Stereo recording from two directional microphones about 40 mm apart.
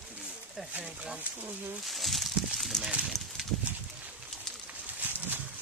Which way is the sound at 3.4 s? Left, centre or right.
Centre.